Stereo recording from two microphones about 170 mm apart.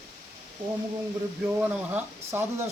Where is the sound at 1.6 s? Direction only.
10° right (ahead or behind).